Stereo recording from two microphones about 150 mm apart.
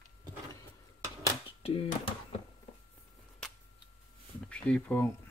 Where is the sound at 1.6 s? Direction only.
40° left (ahead or behind).